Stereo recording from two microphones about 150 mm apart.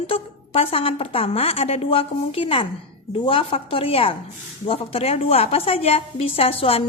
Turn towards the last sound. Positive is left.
turn(degrees=40)  # may be behind; listen again after turning